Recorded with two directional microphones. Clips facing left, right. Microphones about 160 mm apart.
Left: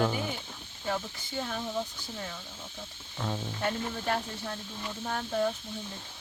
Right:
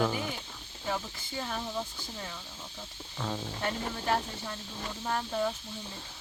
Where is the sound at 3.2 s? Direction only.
10° left (ahead or behind).